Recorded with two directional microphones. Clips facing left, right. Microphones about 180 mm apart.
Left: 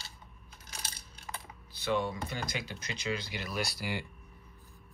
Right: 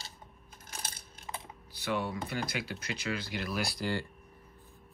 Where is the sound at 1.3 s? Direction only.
20° right (ahead or behind).